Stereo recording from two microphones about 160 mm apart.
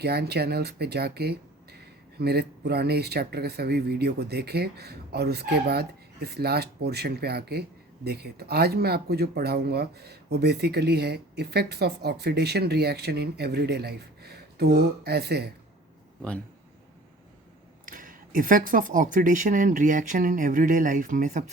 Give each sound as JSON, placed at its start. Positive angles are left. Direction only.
{"t": 0.0, "sound": "speech", "side_deg": -90}
{"t": 17.8, "sound": "speech", "side_deg": -60}